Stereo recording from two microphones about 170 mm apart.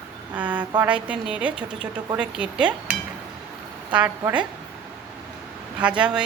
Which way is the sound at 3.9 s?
10° right (ahead or behind).